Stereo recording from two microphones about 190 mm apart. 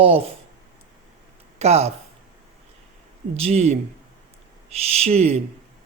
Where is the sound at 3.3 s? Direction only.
35° right (ahead or behind).